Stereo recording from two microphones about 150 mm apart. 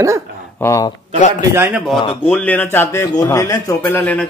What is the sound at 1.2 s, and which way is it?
Speech, 55° left (ahead or behind).